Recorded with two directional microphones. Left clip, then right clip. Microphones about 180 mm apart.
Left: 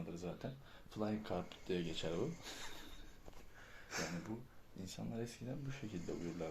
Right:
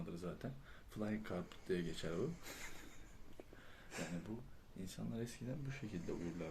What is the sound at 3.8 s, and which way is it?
Speech, centre (ahead or behind).